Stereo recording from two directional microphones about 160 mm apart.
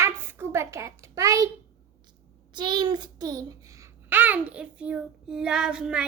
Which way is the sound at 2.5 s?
30° right (ahead or behind).